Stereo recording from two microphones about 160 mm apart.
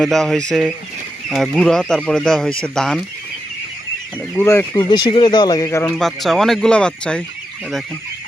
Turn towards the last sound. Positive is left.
turn(degrees=5)  # may be behind; listen again after turning